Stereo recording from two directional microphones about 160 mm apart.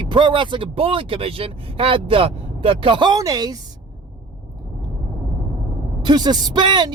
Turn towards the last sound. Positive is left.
turn(degrees=-30)  # may be behind; listen again after turning